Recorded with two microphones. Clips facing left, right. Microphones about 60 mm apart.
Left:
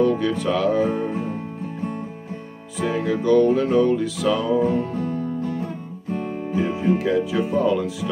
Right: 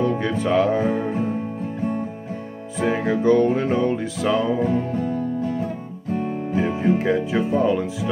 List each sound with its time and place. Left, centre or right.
0.0 s speech: right
2.8 s music: right
6.5 s speech: right